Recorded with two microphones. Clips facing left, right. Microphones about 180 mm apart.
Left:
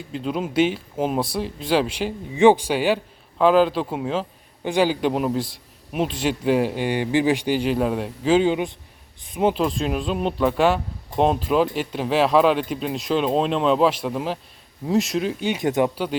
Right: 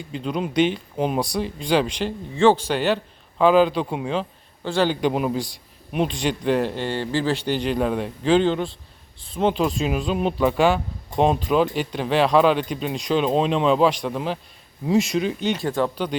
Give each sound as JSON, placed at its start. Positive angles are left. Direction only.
{"t": 0.1, "sound": "speech", "side_deg": 0}
{"t": 4.6, "sound": "a man's voice", "side_deg": 15}
{"t": 4.9, "sound": "speech", "side_deg": 0}